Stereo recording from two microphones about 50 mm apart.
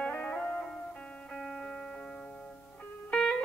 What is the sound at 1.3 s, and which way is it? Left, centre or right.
Music, centre.